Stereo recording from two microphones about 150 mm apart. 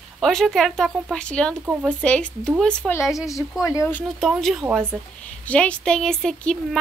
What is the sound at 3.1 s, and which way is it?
Speech, 20° left (ahead or behind).